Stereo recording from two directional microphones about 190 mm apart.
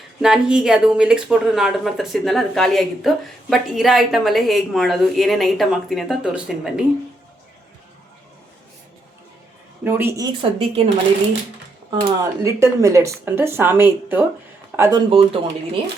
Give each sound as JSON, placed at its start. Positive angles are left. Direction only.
{"t": 0.2, "sound": "a woman's voice", "side_deg": -5}
{"t": 9.8, "sound": "speech", "side_deg": -10}
{"t": 10.6, "sound": "speech", "side_deg": -30}
{"t": 11.9, "sound": "speech", "side_deg": -15}
{"t": 15.1, "sound": "speech", "side_deg": -30}